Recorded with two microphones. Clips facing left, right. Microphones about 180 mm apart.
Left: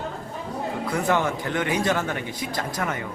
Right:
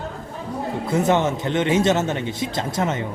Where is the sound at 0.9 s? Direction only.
20° right (ahead or behind).